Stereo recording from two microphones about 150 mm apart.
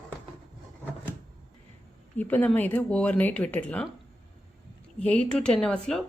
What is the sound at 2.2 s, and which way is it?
Speech, 10° left (ahead or behind).